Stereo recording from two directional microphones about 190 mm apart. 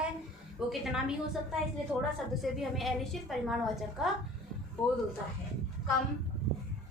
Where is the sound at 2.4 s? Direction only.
Centre (ahead or behind).